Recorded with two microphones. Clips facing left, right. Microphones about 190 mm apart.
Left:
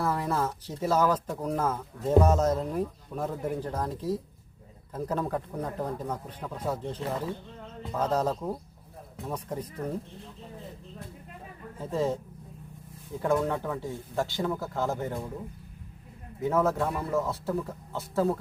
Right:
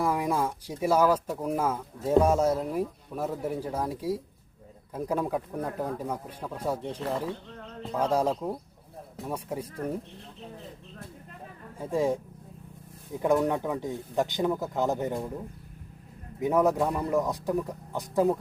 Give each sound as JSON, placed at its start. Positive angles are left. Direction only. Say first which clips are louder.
{"t": 0.0, "sound": "speech", "louder": "right 2 dB", "side_deg": -15}
{"t": 11.8, "sound": "speech", "louder": "right 2 dB", "side_deg": -10}
{"t": 13.2, "sound": "speech", "louder": "right 2 dB", "side_deg": -15}
{"t": 16.4, "sound": "speech", "louder": "right 2 dB", "side_deg": -15}